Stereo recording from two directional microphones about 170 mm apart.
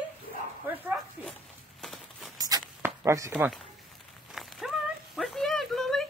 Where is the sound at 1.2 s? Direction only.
10° right (ahead or behind).